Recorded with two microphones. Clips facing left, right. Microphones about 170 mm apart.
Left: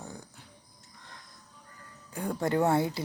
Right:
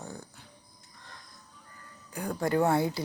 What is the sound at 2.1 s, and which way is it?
Speech, 25° left (ahead or behind).